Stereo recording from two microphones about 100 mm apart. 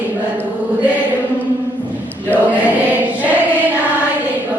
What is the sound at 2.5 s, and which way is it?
Choir, 15° right (ahead or behind).